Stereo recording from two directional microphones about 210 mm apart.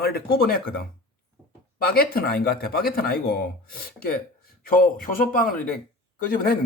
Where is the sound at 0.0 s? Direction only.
45° left (ahead or behind).